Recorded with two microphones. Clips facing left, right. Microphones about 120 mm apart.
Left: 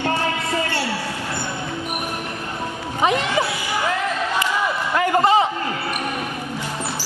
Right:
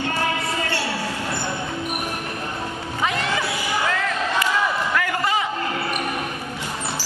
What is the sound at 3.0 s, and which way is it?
Music, 20° left (ahead or behind).